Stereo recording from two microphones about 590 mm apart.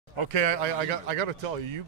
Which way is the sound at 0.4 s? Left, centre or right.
Right.